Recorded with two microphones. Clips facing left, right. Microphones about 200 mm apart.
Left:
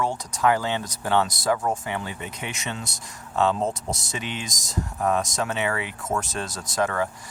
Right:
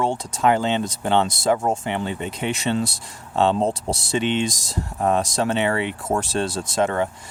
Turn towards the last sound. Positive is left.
turn(degrees=-25)  # may be behind; listen again after turning